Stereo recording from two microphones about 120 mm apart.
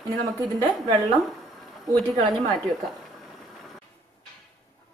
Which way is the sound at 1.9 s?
35° right (ahead or behind).